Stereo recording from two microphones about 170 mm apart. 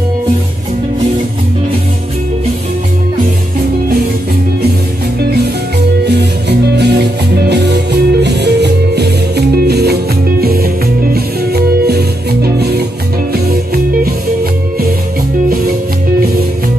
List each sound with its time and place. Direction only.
6.8 s music: 80° right